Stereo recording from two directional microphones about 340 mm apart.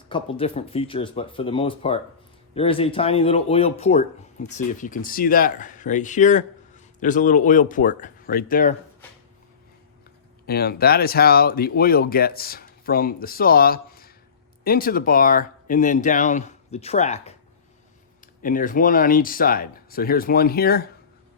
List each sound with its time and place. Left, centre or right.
0.1 s speech: centre
10.4 s speech: left
18.4 s speech: left